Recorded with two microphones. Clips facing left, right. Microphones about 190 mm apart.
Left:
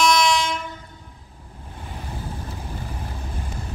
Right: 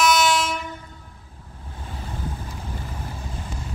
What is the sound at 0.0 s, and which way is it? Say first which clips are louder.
Train: even; 5° right (ahead or behind).